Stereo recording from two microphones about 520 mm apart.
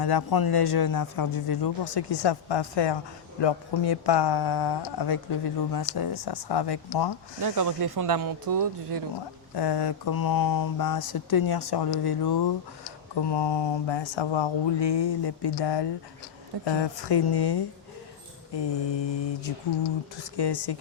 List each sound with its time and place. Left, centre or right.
0.0 s speech: left
7.4 s speech: right
9.6 s mantra: left
11.1 s speech: left
20.3 s speech: left